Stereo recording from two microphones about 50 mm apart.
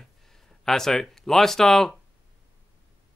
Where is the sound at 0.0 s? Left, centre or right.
Centre.